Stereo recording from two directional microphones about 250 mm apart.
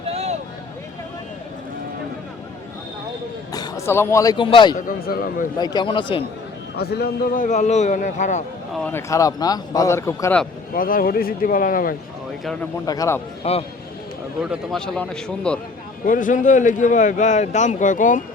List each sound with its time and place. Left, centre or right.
0.1 s a sound: right
3.5 s speech: centre
4.9 s speech: left
5.5 s a man's voice: centre
6.7 s a man's voice: left
8.7 s a man's voice: centre
10.8 s speech: left
12.8 s a man's voice: centre
13.4 s a man's voice: left
14.4 s a man's voice: centre
16.0 s speech: left